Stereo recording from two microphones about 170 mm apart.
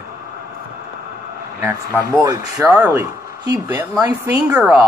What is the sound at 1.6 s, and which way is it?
A woman's voice, 15° right (ahead or behind).